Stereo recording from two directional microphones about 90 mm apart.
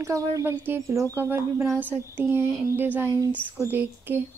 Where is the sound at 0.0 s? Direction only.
35° right (ahead or behind).